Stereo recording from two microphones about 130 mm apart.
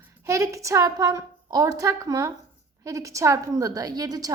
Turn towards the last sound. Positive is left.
turn(degrees=-30)  # may be behind; listen again after turning